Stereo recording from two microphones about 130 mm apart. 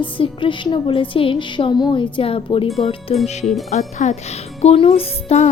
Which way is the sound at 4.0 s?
60° left (ahead or behind).